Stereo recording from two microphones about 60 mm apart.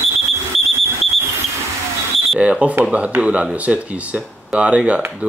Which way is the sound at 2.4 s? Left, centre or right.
Right.